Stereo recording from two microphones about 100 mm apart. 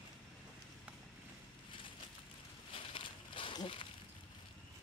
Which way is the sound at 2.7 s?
60° left (ahead or behind).